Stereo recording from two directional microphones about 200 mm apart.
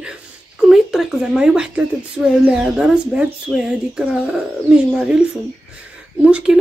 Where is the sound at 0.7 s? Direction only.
Centre (ahead or behind).